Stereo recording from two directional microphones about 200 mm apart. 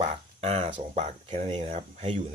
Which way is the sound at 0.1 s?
30° right (ahead or behind).